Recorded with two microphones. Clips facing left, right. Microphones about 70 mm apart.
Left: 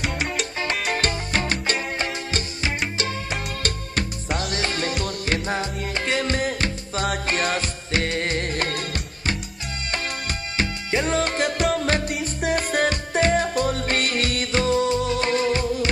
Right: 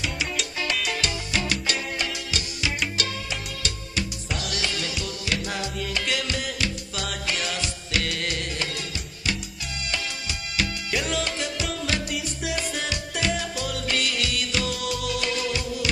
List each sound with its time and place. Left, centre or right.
0.0 s salsa music: left
0.7 s music: left